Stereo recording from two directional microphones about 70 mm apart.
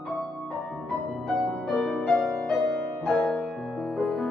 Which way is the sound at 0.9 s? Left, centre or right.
Centre.